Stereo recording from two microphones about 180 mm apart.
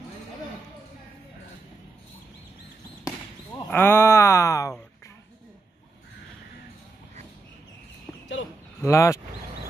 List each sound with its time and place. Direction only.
3.7 s speech: 10° left (ahead or behind)
8.8 s speech: 15° left (ahead or behind)